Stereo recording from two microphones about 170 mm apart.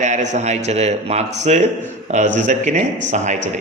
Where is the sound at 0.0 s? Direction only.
45° right (ahead or behind).